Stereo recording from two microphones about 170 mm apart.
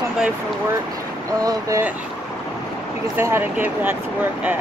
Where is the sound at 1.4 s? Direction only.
20° right (ahead or behind).